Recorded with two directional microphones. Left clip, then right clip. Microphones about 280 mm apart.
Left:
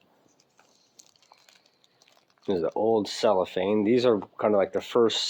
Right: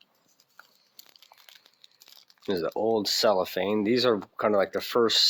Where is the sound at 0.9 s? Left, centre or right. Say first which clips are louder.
Right 5 dB; centre.